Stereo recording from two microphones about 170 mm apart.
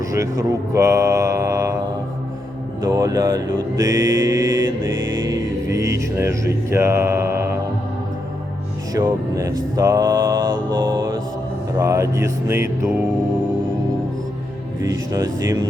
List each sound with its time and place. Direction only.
0.0 s speech: 20° right (ahead or behind)
2.8 s mantra: 20° right (ahead or behind)
4.9 s music: 90° right
5.3 s mantra: 20° right (ahead or behind)
8.9 s mantra: 20° right (ahead or behind)
11.8 s speech: 20° right (ahead or behind)
14.8 s mantra: 20° right (ahead or behind)